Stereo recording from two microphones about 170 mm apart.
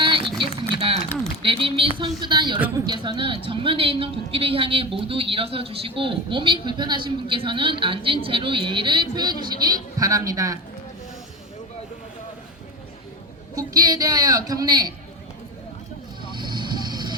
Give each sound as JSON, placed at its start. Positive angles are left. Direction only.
{"t": 0.0, "sound": "a sound", "side_deg": -30}
{"t": 1.4, "sound": "a woman's voice", "side_deg": -30}
{"t": 13.6, "sound": "a man's voice", "side_deg": -20}
{"t": 16.3, "sound": "vehicle", "side_deg": -25}